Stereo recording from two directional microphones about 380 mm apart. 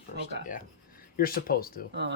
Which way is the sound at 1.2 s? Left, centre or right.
Left.